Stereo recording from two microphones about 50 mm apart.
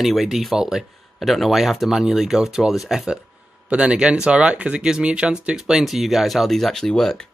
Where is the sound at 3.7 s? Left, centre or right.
Right; by 7.2 s centre.